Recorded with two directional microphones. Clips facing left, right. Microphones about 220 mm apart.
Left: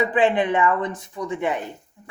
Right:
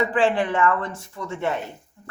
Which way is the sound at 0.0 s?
20° left (ahead or behind).